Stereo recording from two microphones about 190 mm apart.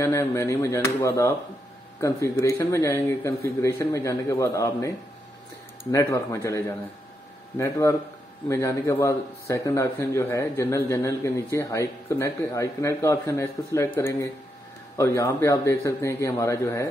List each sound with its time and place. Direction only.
0.0 s a man's voice: 15° left (ahead or behind)